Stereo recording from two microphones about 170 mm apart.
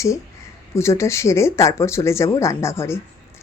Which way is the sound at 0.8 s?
15° left (ahead or behind).